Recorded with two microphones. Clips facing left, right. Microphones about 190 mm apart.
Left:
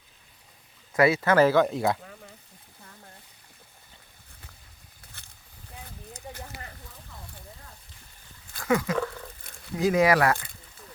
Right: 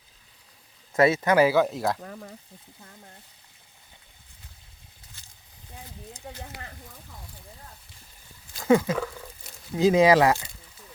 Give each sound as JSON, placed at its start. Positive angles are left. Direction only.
{"t": 0.9, "sound": "speech", "side_deg": -25}
{"t": 5.2, "sound": "boat", "side_deg": 60}
{"t": 8.5, "sound": "a sound", "side_deg": -25}
{"t": 9.7, "sound": "speech", "side_deg": -20}